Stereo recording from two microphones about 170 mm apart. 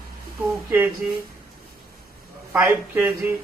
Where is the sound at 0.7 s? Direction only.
15° right (ahead or behind).